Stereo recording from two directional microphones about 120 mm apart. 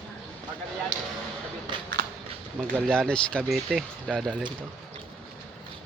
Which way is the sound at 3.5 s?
5° right (ahead or behind).